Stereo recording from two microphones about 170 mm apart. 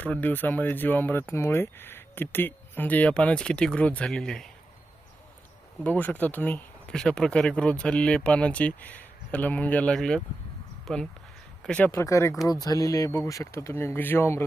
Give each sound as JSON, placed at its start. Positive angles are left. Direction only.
{"t": 0.0, "sound": "speech", "side_deg": 10}
{"t": 5.8, "sound": "speech", "side_deg": 10}